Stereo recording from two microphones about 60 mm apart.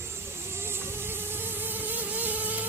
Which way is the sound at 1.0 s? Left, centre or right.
Right.